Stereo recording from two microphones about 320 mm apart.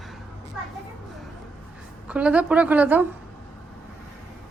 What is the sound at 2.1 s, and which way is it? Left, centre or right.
Speech, centre.